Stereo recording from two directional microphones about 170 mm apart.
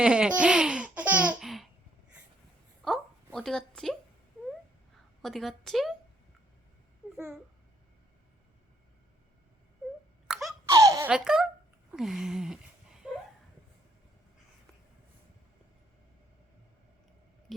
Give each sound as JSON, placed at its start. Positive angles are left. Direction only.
{"t": 0.0, "sound": "speech", "side_deg": -5}
{"t": 2.8, "sound": "a sound", "side_deg": 0}
{"t": 3.3, "sound": "a woman's voice", "side_deg": 0}
{"t": 5.2, "sound": "a woman's voice", "side_deg": 0}
{"t": 7.0, "sound": "a sound", "side_deg": -5}
{"t": 10.2, "sound": "sneeze", "side_deg": -5}
{"t": 10.7, "sound": "baby laughter", "side_deg": -20}
{"t": 11.1, "sound": "a woman's voice", "side_deg": -5}
{"t": 11.9, "sound": "a sound", "side_deg": 0}